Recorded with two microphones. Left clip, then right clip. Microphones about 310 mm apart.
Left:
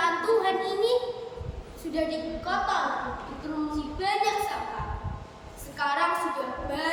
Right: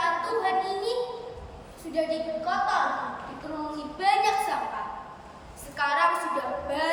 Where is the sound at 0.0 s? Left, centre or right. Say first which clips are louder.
Left 2 dB; centre.